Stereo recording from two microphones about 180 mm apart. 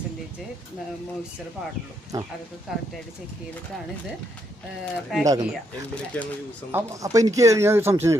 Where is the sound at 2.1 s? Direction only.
20° right (ahead or behind).